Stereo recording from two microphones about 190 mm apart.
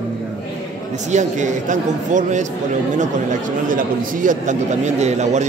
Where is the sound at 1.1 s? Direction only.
40° right (ahead or behind).